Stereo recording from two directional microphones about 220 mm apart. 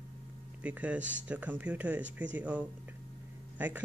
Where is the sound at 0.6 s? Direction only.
5° right (ahead or behind).